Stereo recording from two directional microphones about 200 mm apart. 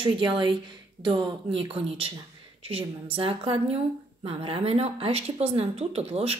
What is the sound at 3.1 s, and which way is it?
A woman's voice, 25° right (ahead or behind).